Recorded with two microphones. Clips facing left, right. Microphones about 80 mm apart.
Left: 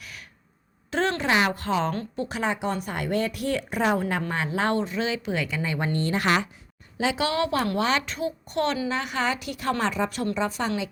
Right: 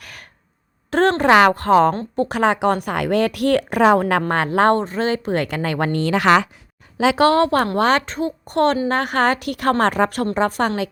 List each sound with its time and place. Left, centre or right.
0.9 s a sound: right
1.2 s a woman's voice: right
4.2 s speech: right
7.2 s a woman's voice: right